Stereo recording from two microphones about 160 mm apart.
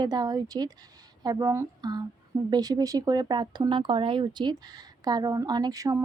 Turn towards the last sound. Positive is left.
turn(degrees=-20)  # may be behind; listen again after turning